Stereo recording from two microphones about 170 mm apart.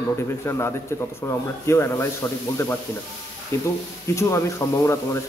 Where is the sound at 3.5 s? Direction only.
15° left (ahead or behind).